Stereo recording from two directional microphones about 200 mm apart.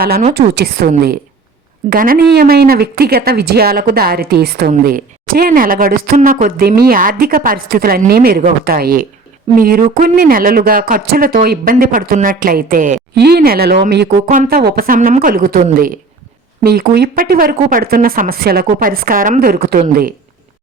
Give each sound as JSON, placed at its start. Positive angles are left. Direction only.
{"t": 0.0, "sound": "speech", "side_deg": -50}
{"t": 14.3, "sound": "speech", "side_deg": -40}